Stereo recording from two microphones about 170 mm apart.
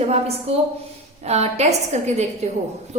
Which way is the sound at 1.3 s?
40° right (ahead or behind).